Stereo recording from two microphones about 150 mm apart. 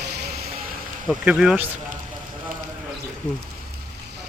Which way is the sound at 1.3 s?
5° right (ahead or behind).